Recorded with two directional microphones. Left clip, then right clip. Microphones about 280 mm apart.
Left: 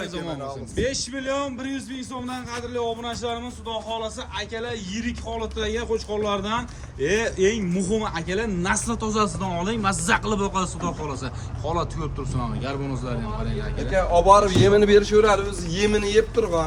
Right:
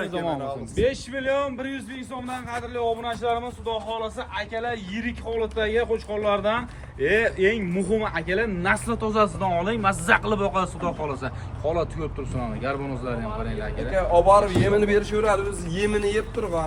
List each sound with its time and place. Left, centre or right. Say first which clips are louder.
0.0 s a man's voice: right 4 dB; centre
1.1 s a man's voice: right 2 dB; centre
13.9 s a man's voice: left 1 dB; left